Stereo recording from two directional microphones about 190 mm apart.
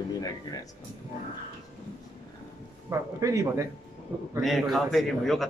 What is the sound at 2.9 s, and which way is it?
Speech, 15° right (ahead or behind).